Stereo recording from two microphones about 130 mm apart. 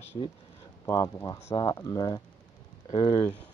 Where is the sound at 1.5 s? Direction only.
30° left (ahead or behind).